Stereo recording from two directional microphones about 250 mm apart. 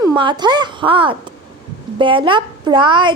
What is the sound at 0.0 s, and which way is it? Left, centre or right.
A woman's voice, centre.